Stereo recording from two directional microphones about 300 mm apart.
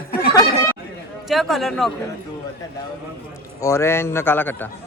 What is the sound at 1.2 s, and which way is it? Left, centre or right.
Speech, centre.